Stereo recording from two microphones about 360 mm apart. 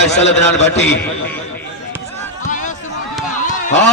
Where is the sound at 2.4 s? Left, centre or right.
Left.